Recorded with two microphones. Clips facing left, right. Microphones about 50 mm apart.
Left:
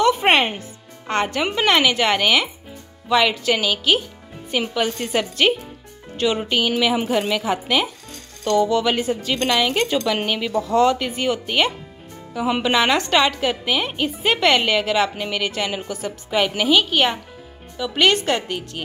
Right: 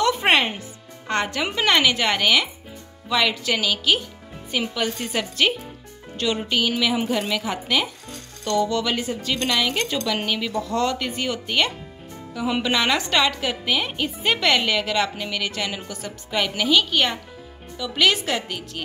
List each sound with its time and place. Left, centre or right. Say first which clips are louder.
0.0 s music: left 3 dB; centre
1.0 s a woman's voice: left 3 dB; centre
1.7 s a woman's voice: left 2 dB; centre
4.9 s a woman's voice: left 3 dB; centre
7.4 s speech: left 3 dB; centre
15.1 s speech: left 3 dB; left
15.4 s speech: left 4 dB; centre